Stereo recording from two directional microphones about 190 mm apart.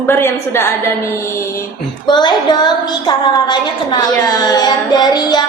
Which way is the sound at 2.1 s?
25° left (ahead or behind).